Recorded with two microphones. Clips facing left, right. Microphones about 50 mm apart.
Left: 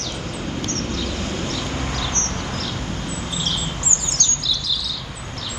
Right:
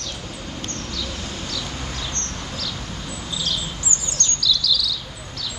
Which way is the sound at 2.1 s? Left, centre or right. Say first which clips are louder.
Left 5 dB; left.